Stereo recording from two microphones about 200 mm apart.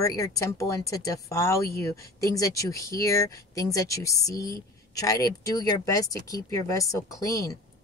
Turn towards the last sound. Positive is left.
turn(degrees=15)  # may be behind; listen again after turning